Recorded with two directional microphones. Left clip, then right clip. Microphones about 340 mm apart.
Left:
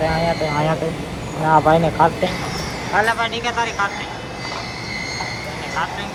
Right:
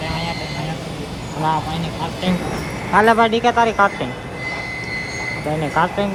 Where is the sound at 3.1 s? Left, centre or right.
Centre.